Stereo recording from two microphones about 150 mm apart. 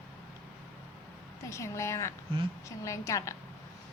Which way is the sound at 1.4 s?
20° left (ahead or behind).